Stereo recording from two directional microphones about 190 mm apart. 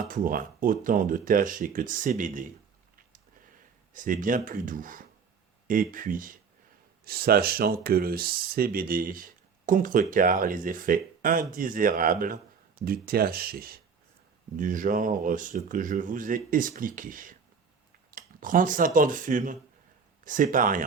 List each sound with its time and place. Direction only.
0.1 s speech: 45° right (ahead or behind)
3.9 s speech: 45° right (ahead or behind)
18.1 s a sound: 45° right (ahead or behind)
18.9 s speech: 45° right (ahead or behind)